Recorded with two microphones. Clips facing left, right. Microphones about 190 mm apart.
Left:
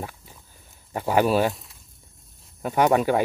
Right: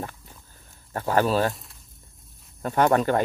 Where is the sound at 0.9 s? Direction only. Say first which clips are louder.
Left 2 dB; 15° left (ahead or behind).